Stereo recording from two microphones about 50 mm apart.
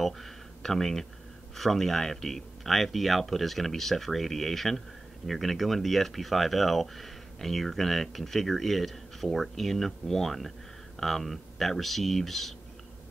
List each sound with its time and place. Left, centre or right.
0.6 s speech: centre